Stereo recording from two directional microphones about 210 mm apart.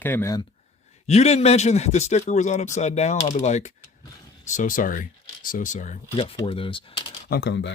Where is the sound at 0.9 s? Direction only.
30° left (ahead or behind).